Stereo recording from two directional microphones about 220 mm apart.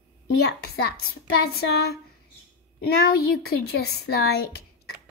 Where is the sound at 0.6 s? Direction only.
45° left (ahead or behind).